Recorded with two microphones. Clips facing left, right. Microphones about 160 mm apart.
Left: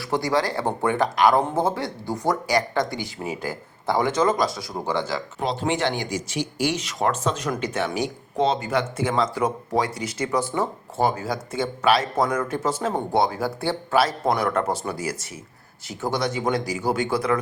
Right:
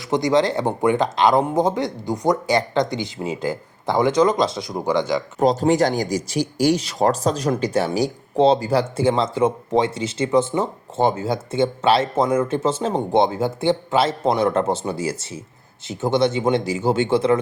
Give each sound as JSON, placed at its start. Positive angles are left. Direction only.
{"t": 0.1, "sound": "speech", "side_deg": -20}
{"t": 5.4, "sound": "speech", "side_deg": -40}